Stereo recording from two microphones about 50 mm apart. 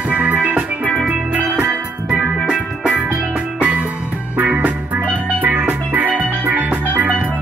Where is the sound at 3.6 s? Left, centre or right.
Right.